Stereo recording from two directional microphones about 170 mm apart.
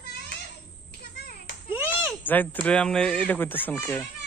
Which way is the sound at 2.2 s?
10° left (ahead or behind).